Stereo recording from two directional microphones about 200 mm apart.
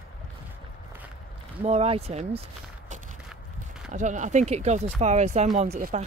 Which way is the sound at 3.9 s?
35° right (ahead or behind).